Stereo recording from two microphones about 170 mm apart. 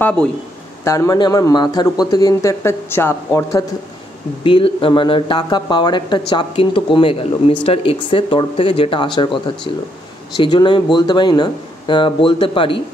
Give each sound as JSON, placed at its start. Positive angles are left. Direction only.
{"t": 0.0, "sound": "speech", "side_deg": 5}
{"t": 0.8, "sound": "speech", "side_deg": 20}
{"t": 4.4, "sound": "speech", "side_deg": 30}